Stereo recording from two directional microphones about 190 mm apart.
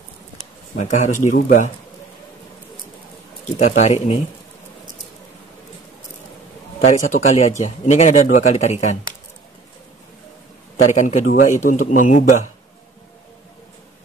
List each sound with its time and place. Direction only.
0.7 s speech: 40° left (ahead or behind)
3.5 s speech: 35° left (ahead or behind)
6.9 s speech: 40° left (ahead or behind)
10.9 s speech: 40° left (ahead or behind)